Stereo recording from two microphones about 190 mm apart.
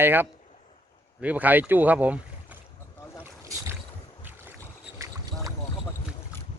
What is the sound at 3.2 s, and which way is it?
Boat, 15° right (ahead or behind).